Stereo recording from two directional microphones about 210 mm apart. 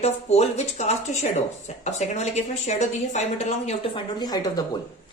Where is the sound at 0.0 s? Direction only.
30° left (ahead or behind).